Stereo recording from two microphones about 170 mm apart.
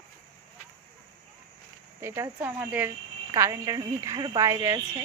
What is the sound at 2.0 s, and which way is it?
Speech, 15° right (ahead or behind).